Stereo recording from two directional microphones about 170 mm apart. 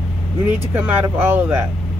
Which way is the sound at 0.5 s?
10° right (ahead or behind).